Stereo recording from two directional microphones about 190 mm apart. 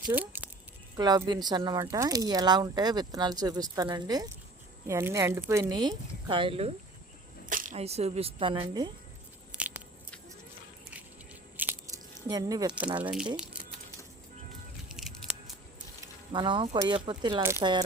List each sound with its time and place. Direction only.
0.1 s speech: 10° right (ahead or behind)
0.9 s speech: 20° right (ahead or behind)
7.5 s speech: 40° right (ahead or behind); by 8.9 s 25° right (ahead or behind)
9.6 s biting: 10° right (ahead or behind)
11.5 s a sound: 10° right (ahead or behind)
13.0 s speech: 5° right (ahead or behind)
13.3 s crumpling: 5° right (ahead or behind)
14.8 s music: centre (ahead or behind)
16.3 s speech: 25° right (ahead or behind)